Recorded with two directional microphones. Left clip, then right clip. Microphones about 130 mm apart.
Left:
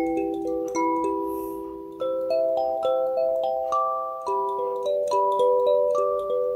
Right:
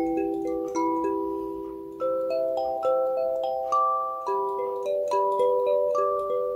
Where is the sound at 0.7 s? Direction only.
25° left (ahead or behind).